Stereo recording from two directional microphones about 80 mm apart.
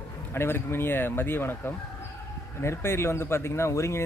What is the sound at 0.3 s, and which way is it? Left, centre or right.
Speech, left.